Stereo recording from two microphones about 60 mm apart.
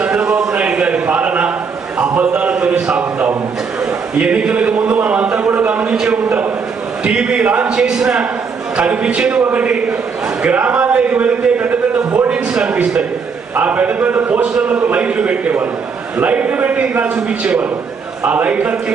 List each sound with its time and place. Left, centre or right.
0.0 s a sound: centre
4.2 s a man's voice: centre
5.9 s a man's voice: centre; by 12.3 s right
12.3 s a man's voice: centre